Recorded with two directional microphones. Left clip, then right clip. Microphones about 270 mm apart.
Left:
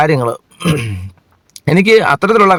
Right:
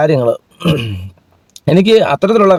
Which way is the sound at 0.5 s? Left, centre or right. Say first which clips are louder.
Right 1 dB; left.